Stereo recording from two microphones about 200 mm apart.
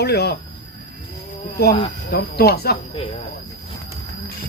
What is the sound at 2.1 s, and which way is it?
Speech, 55° left (ahead or behind).